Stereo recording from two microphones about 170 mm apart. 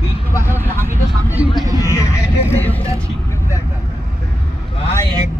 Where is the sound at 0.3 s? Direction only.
15° left (ahead or behind).